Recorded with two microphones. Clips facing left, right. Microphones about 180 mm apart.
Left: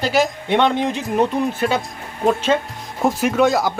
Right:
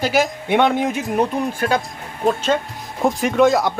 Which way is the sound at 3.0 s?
Centre (ahead or behind).